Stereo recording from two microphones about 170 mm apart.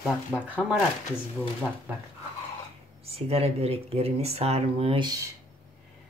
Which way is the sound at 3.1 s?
35° right (ahead or behind).